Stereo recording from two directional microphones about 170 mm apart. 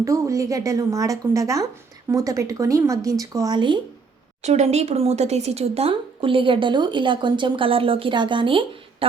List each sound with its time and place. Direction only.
0.0 s a woman's voice: 20° right (ahead or behind)
4.4 s speech: 40° right (ahead or behind)